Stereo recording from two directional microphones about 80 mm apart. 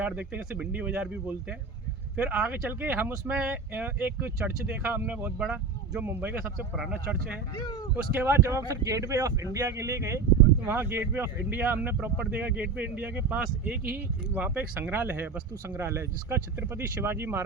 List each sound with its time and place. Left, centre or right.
0.0 s speech: centre
5.4 s speech: centre
6.0 s speech: right
7.5 s speech: left
7.9 s speech: right
8.4 s speech: right